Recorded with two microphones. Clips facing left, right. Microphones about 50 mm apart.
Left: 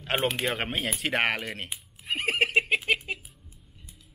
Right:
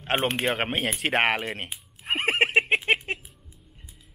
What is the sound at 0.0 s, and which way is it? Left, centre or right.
Speech, right.